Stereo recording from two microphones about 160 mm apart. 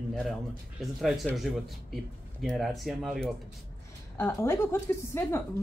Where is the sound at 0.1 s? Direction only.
Centre (ahead or behind).